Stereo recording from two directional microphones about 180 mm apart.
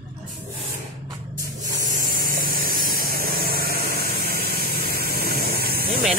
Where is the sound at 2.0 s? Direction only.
50° right (ahead or behind).